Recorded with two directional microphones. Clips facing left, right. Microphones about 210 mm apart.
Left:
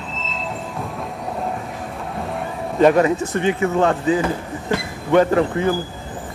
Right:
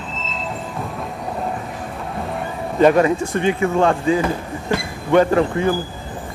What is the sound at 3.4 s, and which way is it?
Speech, 20° left (ahead or behind).